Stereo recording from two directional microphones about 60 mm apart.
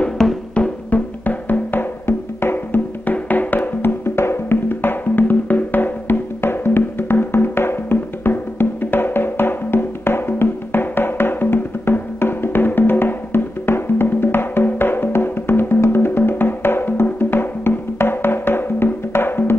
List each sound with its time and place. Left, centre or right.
0.2 s music: centre
0.6 s music: left
4.0 s music: left